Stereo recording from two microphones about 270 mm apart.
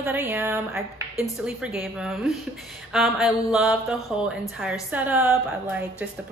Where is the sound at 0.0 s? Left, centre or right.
Centre.